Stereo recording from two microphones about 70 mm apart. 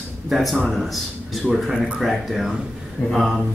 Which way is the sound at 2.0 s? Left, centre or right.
Centre.